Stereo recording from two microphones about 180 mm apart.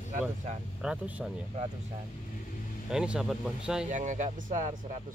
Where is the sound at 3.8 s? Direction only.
40° right (ahead or behind).